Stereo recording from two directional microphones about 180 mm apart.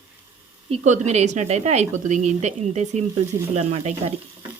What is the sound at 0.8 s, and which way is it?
A woman's voice, 40° right (ahead or behind).